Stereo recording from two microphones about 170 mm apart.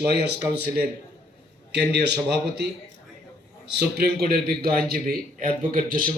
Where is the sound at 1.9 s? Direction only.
75° right (ahead or behind).